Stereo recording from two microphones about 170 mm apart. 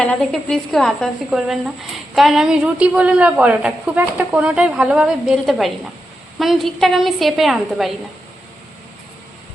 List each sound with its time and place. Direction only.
0.0 s a woman's voice: 5° left (ahead or behind)